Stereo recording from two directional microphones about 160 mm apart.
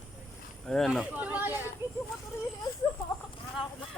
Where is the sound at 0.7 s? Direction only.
5° left (ahead or behind).